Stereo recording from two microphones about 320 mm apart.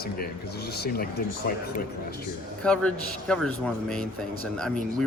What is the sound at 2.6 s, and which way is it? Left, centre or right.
Speech, centre.